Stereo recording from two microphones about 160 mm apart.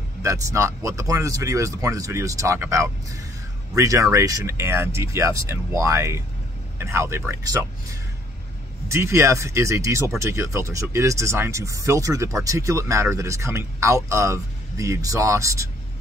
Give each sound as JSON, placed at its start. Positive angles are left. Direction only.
{"t": 0.2, "sound": "speech", "side_deg": -20}